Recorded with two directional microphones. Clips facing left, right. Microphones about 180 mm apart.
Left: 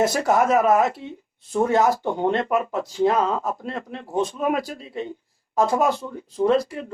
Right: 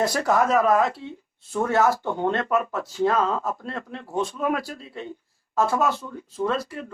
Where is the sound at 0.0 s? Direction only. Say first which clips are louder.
Left 2 dB; 25° left (ahead or behind).